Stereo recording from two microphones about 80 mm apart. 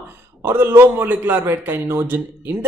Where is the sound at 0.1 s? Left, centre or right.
Right.